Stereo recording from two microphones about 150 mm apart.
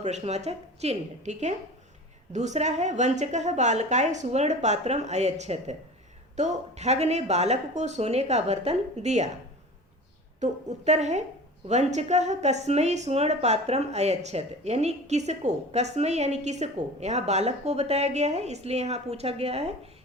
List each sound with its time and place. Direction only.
0.0 s a woman's voice: 50° right (ahead or behind)
10.4 s a woman's voice: 50° right (ahead or behind)